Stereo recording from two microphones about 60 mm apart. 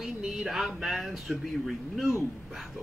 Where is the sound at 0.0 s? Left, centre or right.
Centre.